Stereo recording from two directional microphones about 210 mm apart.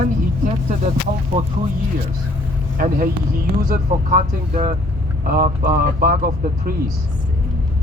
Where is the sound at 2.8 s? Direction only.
40° right (ahead or behind).